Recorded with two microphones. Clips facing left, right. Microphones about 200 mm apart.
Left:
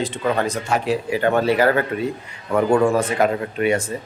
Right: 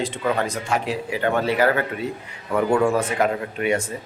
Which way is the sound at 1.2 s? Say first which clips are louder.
Left 2 dB; 40° left (ahead or behind).